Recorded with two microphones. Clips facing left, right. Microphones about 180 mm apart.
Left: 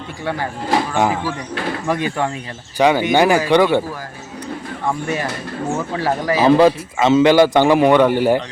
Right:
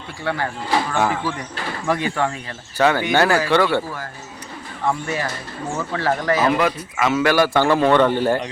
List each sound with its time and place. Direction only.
0.9 s a man's voice: 15° left (ahead or behind)
4.9 s a man's voice: 10° left (ahead or behind)
6.4 s a man's voice: 30° left (ahead or behind); by 8.4 s 10° left (ahead or behind)